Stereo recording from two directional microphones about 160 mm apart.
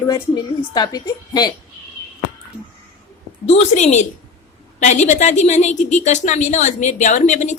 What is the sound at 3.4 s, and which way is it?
A woman's voice, 40° left (ahead or behind).